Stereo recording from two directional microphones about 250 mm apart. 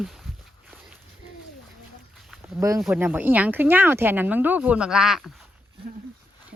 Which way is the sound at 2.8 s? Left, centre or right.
Centre.